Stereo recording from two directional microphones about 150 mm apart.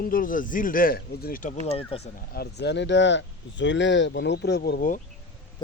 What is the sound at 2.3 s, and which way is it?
Speech, 90° left.